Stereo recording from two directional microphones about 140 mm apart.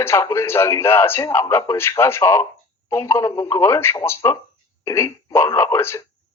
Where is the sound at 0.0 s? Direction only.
20° left (ahead or behind).